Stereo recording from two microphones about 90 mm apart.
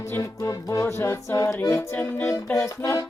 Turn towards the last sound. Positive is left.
turn(degrees=30)  # may be behind; listen again after turning